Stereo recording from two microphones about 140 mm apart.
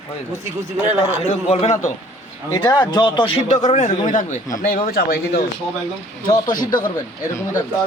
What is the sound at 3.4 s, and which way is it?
Speech, 55° left (ahead or behind).